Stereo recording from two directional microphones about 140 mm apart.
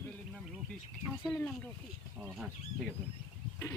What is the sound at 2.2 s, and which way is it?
Speech, 10° right (ahead or behind).